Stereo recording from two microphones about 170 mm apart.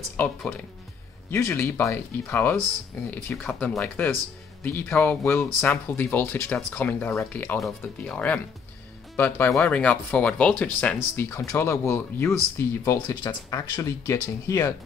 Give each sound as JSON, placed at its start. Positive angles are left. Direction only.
{"t": 0.2, "sound": "speech", "side_deg": 10}